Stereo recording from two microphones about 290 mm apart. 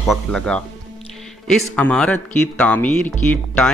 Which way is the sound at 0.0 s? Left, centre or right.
Centre.